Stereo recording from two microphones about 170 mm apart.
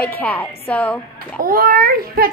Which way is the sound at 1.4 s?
60° right (ahead or behind).